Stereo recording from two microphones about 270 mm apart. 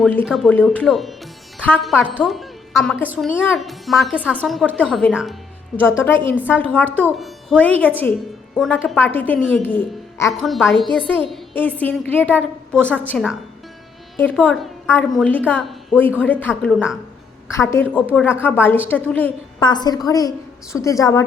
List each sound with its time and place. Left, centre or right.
0.0 s speech: centre
6.9 s a woman's voice: centre
10.8 s a woman's voice: centre
11.3 s a woman's voice: centre